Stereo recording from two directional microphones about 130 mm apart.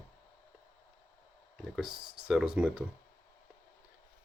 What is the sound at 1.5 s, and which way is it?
Speech, 5° right (ahead or behind).